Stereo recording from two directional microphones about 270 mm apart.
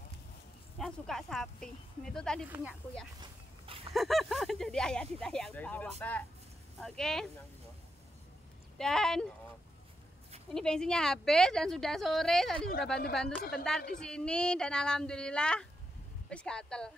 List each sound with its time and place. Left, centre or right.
0.7 s speech: centre
3.2 s a sound: centre
3.9 s speech: centre
8.7 s speech: centre
10.5 s speech: centre
13.4 s a woman's voice: left
13.9 s speech: centre